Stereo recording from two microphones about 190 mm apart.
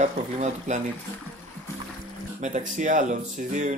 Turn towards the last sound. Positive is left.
turn(degrees=-40)  # may be behind; listen again after turning